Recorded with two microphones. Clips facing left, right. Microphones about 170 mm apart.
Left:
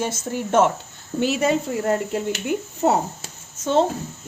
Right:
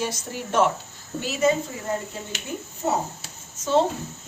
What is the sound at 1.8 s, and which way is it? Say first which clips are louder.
Speech: left 8 dB; 65° left (ahead or behind).